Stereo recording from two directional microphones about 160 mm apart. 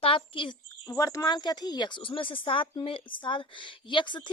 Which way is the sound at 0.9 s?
20° left (ahead or behind).